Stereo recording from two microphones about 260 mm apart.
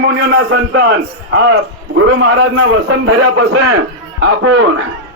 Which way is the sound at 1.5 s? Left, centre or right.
Right.